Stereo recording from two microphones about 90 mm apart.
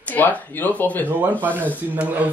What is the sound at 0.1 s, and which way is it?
Speech, 20° left (ahead or behind).